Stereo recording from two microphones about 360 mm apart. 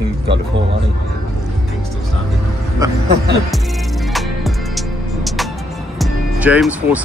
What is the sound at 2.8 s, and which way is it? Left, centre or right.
Speech, centre.